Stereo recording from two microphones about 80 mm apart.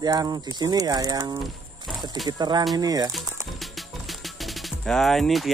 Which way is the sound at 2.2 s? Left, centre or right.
Right.